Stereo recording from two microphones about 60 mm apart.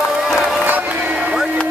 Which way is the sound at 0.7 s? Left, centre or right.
Right.